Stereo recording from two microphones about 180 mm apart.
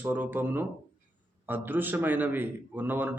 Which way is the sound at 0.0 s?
10° right (ahead or behind).